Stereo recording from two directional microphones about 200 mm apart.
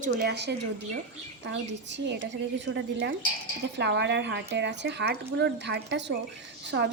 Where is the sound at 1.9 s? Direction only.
60° right (ahead or behind).